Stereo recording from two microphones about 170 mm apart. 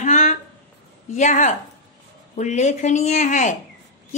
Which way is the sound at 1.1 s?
45° left (ahead or behind).